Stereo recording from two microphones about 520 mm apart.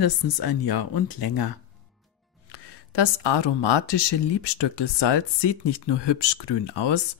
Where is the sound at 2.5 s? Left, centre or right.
Left.